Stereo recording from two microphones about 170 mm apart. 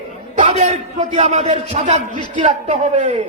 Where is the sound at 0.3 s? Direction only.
45° right (ahead or behind).